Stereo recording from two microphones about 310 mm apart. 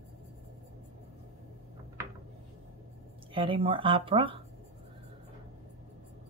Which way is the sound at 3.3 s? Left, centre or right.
Centre.